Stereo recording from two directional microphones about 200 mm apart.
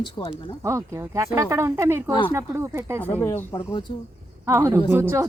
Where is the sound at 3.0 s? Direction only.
10° left (ahead or behind).